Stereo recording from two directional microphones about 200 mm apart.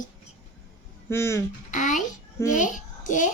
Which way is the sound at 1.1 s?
15° left (ahead or behind).